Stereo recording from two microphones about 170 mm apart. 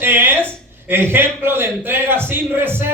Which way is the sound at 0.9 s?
15° right (ahead or behind).